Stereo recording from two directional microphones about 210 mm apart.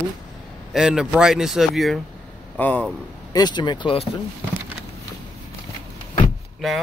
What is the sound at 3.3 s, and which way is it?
Speech, 20° left (ahead or behind).